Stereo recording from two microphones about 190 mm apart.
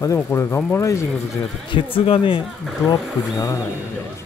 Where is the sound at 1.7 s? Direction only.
30° left (ahead or behind).